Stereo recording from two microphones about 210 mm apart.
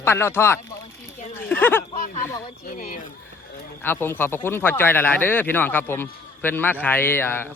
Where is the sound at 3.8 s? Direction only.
10° left (ahead or behind).